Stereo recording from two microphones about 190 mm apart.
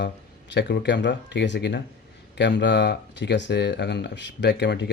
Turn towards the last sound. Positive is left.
turn(degrees=65)  # may be behind; listen again after turning